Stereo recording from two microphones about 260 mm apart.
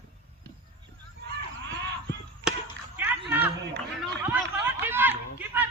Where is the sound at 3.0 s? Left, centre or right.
Centre.